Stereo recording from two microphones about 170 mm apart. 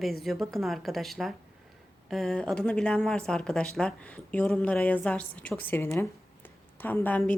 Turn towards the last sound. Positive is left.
turn(degrees=10)  # may be behind; listen again after turning